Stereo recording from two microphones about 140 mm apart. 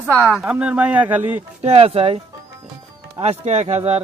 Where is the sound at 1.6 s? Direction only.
45° right (ahead or behind).